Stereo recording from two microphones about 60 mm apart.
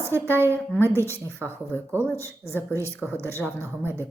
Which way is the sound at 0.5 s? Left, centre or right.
Left.